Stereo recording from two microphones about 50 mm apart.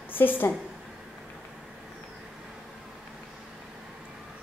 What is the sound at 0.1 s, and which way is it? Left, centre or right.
Speech, left.